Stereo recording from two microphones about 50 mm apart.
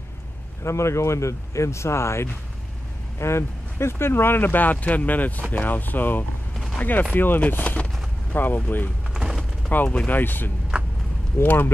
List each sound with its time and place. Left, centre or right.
0.7 s speech: left
9.1 s a sound: centre
9.8 s speech: left
10.1 s speech: left
10.7 s a sound: right
11.4 s speech: left